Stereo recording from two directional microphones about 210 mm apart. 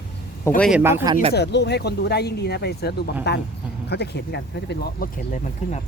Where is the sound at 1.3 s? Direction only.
50° left (ahead or behind).